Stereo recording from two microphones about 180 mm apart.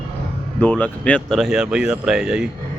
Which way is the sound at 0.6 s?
10° left (ahead or behind).